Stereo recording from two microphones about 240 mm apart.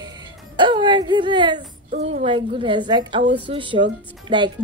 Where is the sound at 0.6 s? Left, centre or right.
Centre.